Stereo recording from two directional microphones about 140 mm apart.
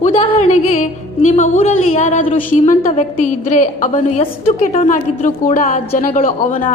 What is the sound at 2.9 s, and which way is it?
A woman's voice, 65° left (ahead or behind).